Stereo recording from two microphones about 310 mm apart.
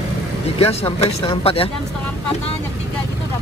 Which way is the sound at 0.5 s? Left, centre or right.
Centre.